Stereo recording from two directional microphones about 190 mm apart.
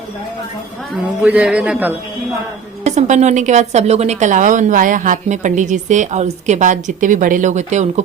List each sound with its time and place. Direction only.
1.2 s a man's voice: 5° right (ahead or behind)
2.8 s a woman's voice: 35° right (ahead or behind)